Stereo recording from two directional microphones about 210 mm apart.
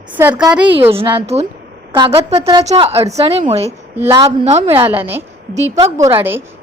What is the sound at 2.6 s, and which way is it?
A woman's voice, 25° right (ahead or behind).